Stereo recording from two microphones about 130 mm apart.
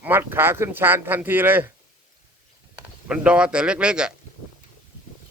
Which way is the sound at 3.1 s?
10° right (ahead or behind).